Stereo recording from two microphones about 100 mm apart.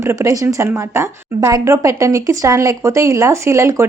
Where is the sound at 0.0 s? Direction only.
30° right (ahead or behind).